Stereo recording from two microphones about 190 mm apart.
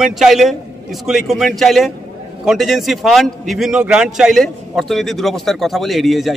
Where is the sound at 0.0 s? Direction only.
Centre (ahead or behind).